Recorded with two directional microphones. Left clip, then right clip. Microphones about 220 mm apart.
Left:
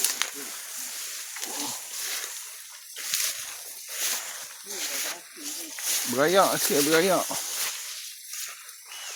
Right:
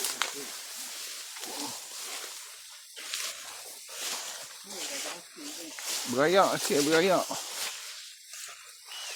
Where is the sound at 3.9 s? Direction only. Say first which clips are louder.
Left 6 dB; 50° left (ahead or behind).